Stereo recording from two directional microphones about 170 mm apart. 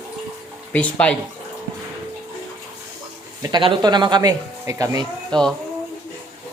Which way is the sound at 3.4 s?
25° right (ahead or behind).